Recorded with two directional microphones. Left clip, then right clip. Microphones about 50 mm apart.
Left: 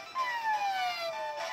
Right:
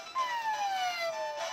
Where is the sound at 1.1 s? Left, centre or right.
Right.